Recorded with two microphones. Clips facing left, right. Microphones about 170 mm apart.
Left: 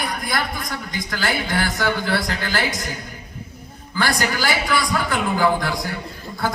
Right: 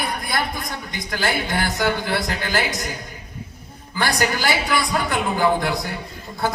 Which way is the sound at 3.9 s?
20° right (ahead or behind).